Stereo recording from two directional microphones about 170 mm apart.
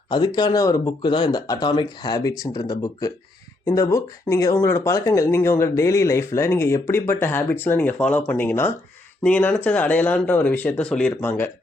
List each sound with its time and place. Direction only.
0.1 s speech: 25° left (ahead or behind)